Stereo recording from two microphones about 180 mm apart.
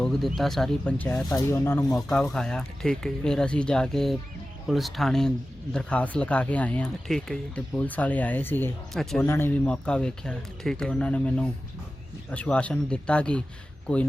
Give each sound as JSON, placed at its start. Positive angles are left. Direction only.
{"t": 0.0, "sound": "a man's voice", "side_deg": 0}
{"t": 1.9, "sound": "a man's voice", "side_deg": 0}
{"t": 9.2, "sound": "a man's voice", "side_deg": 15}